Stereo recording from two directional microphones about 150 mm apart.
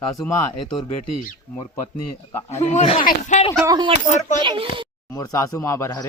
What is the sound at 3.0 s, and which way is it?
Speech, 60° left (ahead or behind).